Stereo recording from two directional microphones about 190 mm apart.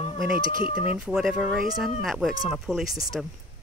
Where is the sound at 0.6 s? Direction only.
25° left (ahead or behind).